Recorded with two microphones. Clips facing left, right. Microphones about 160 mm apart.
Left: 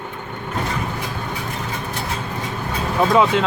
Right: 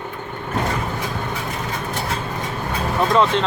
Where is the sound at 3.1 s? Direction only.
5° left (ahead or behind).